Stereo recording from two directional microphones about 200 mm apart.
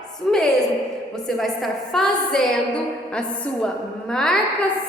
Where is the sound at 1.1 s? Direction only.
Centre (ahead or behind).